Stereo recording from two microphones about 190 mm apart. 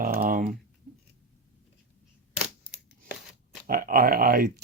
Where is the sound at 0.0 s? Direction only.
50° right (ahead or behind).